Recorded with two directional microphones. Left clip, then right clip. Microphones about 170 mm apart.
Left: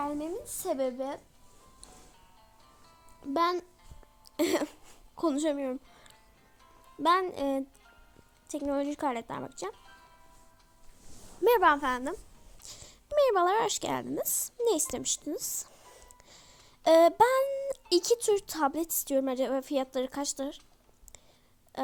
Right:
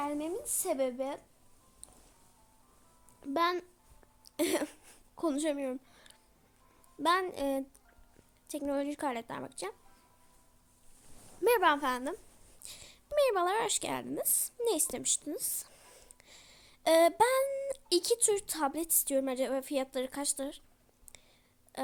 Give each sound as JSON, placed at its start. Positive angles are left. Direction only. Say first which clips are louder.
{"t": 0.0, "sound": "speech", "louder": "left 1 dB", "side_deg": 20}
{"t": 3.2, "sound": "speech", "louder": "left 2 dB", "side_deg": 20}
{"t": 4.3, "sound": "a sound", "louder": "left 3 dB", "side_deg": 20}
{"t": 7.0, "sound": "a woman's voice", "louder": "left 3 dB", "side_deg": 20}
{"t": 11.3, "sound": "speech", "louder": "left 4 dB", "side_deg": 20}